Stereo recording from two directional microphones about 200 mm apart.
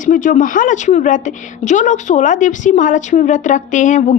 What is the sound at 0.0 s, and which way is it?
A woman's voice, 40° left (ahead or behind).